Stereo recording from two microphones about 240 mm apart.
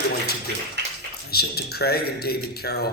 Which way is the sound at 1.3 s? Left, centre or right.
Left.